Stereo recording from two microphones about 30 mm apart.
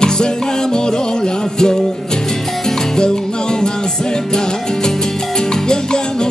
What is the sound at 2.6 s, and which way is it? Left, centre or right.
Music, left.